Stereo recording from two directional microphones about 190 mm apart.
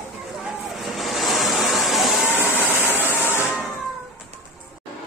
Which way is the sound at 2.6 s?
10° right (ahead or behind).